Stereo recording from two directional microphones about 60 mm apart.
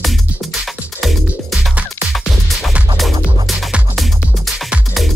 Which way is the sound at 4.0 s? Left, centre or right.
Centre.